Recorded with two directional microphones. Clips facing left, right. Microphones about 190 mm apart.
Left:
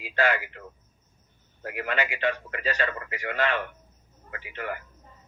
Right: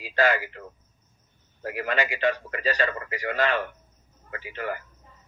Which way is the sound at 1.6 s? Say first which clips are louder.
Right 2 dB; 35° right (ahead or behind).